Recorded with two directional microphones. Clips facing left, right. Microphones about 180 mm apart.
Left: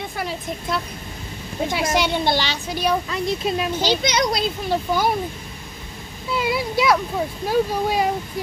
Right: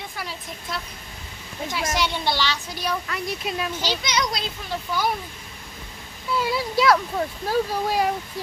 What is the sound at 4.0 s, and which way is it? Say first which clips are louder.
Speech: left 5 dB; 60° left (ahead or behind).